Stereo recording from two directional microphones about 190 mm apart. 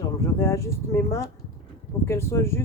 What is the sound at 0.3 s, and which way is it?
Speech, 15° left (ahead or behind).